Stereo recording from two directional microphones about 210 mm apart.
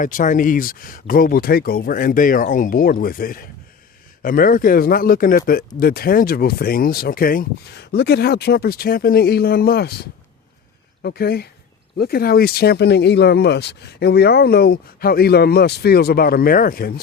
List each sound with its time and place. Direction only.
0.0 s speech: 40° left (ahead or behind)